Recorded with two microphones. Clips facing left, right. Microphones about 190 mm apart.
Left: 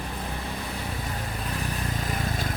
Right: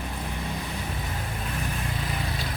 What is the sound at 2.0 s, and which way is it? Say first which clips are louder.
Vehicle: left 2 dB; 45° left (ahead or behind).